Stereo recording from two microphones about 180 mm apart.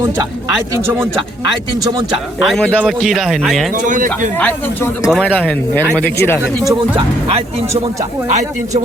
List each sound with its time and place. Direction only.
2.4 s speech: centre (ahead or behind)
3.8 s speech: 45° right (ahead or behind)
4.4 s speech: 5° left (ahead or behind)
6.7 s speech: 30° right (ahead or behind)